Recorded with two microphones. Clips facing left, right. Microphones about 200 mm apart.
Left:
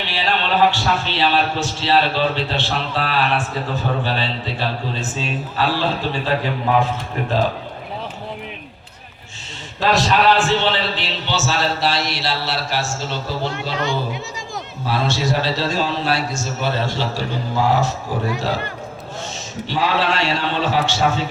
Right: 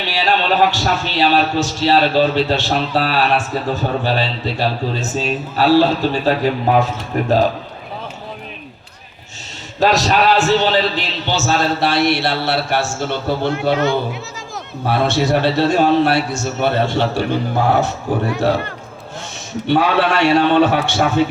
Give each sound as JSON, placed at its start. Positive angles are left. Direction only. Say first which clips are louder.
{"t": 0.1, "sound": "a man's voice", "louder": "right 4 dB", "side_deg": -40}
{"t": 9.8, "sound": "a man's voice", "louder": "right 2 dB", "side_deg": -40}
{"t": 14.8, "sound": "a man's voice", "louder": "right 5 dB", "side_deg": -60}
{"t": 19.6, "sound": "a man's voice", "louder": "right 5 dB", "side_deg": -60}